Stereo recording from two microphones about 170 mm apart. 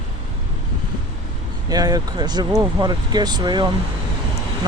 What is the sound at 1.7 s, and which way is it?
Speech, 20° right (ahead or behind).